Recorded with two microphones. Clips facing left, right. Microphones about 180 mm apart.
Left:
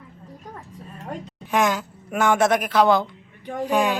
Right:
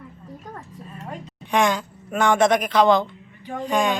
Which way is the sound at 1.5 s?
5° left (ahead or behind).